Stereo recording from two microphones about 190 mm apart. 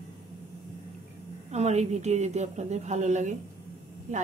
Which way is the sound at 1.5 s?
35° right (ahead or behind).